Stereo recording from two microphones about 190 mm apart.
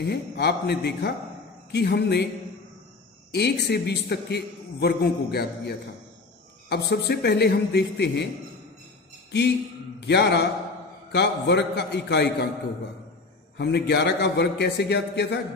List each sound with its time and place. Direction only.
0.0 s a man's voice: 60° left (ahead or behind)
3.3 s a man's voice: 60° left (ahead or behind)
9.9 s a man's voice: 60° left (ahead or behind)
13.6 s a man's voice: 60° left (ahead or behind)